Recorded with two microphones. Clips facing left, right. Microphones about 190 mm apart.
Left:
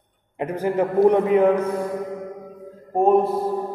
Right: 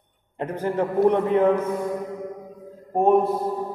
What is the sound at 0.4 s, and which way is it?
A man's voice, 10° left (ahead or behind).